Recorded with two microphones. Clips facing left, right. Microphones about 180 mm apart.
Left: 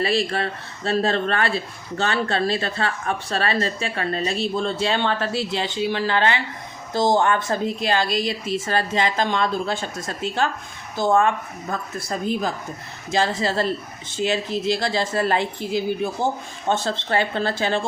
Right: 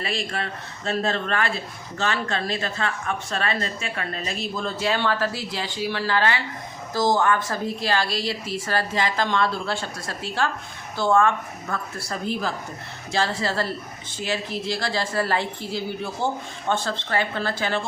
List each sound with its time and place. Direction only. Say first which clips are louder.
0.0 s speech: left 7 dB; 35° left (ahead or behind)